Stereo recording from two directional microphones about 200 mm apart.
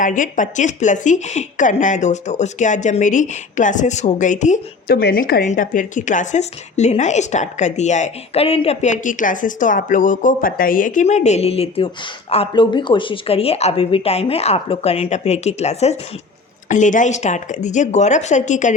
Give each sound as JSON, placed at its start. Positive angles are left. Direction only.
{"t": 0.0, "sound": "a woman's voice", "side_deg": 40}
{"t": 4.9, "sound": "a woman's voice", "side_deg": 50}